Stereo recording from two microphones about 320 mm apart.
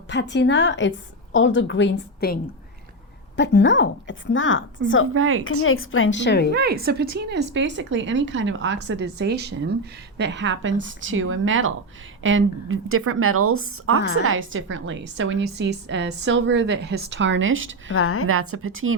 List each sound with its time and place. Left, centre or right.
0.1 s a woman's voice: left
5.1 s a woman's voice: right
5.6 s a woman's voice: left
6.5 s a woman's voice: right
17.9 s a woman's voice: left
18.3 s a woman's voice: right